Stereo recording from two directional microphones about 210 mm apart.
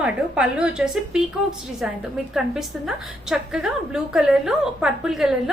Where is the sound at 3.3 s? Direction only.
Centre (ahead or behind).